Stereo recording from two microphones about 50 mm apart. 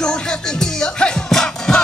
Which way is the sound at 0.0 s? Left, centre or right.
Centre.